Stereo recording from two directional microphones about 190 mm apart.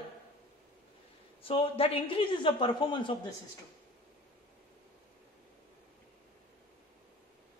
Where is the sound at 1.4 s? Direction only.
30° left (ahead or behind).